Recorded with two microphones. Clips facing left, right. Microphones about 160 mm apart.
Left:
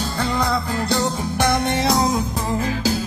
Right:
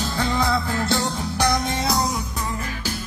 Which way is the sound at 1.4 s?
60° left (ahead or behind).